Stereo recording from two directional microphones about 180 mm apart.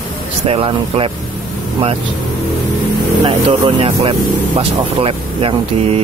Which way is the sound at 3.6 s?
30° right (ahead or behind).